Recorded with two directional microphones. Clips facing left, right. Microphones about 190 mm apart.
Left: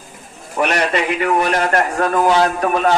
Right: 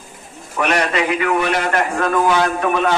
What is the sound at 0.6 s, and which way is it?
A man's voice, 35° left (ahead or behind).